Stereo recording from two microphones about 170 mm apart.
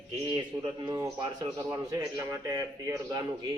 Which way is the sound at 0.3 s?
25° right (ahead or behind).